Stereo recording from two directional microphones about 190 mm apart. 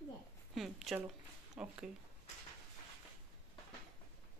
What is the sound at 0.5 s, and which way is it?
Speech, centre (ahead or behind).